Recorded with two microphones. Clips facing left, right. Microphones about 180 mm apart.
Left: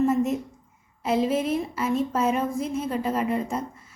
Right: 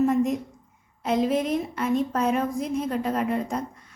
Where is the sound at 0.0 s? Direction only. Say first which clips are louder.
Right 1 dB; centre (ahead or behind).